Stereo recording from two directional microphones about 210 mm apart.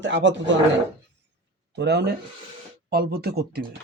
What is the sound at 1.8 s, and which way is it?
Speech, 55° right (ahead or behind).